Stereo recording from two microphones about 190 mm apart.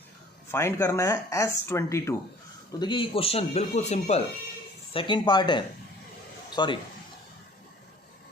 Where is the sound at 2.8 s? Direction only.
25° left (ahead or behind).